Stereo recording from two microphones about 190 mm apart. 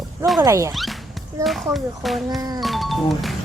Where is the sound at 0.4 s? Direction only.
15° right (ahead or behind).